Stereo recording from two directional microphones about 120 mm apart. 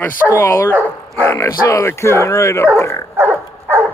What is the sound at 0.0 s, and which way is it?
Speech, 20° left (ahead or behind).